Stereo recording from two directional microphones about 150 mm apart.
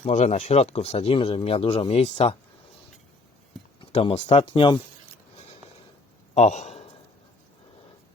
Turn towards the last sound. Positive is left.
turn(degrees=50)  # may be behind; listen again after turning